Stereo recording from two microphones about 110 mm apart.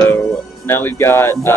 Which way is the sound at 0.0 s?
20° left (ahead or behind).